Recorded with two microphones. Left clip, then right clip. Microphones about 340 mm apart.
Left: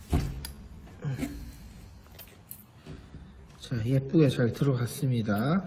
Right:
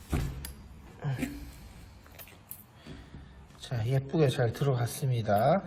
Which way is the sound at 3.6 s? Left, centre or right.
Right.